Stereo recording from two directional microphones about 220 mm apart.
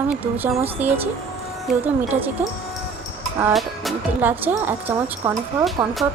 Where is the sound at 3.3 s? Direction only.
5° right (ahead or behind).